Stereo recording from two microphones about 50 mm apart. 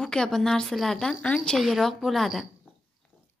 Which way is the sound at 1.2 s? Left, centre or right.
Left.